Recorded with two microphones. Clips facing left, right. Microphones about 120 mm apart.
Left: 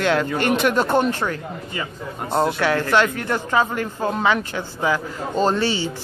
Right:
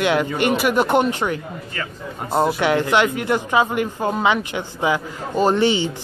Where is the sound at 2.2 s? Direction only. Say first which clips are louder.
Right 1 dB; 5° right (ahead or behind).